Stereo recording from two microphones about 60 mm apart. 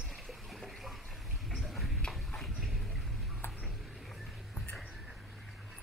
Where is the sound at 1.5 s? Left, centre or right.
Centre.